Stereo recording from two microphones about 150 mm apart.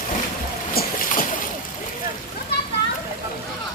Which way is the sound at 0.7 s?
80° left.